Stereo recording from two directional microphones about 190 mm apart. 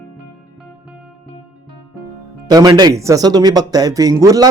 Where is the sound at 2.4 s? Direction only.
20° right (ahead or behind).